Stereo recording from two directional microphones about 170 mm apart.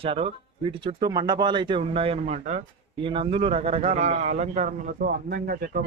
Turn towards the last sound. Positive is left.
turn(degrees=-60)  # may be behind; listen again after turning